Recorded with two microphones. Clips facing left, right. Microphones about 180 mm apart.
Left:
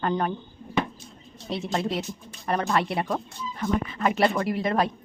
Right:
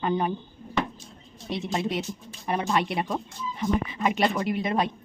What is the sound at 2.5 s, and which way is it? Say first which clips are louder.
Speech: left 1 dB; 10° right (ahead or behind).